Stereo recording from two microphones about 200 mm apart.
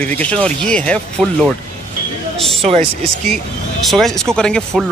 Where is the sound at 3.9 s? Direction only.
Centre (ahead or behind).